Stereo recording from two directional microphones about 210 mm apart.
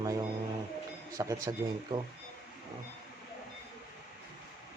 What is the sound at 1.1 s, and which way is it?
Speech, 15° right (ahead or behind).